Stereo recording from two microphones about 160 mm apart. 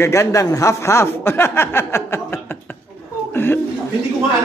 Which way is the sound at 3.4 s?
15° left (ahead or behind).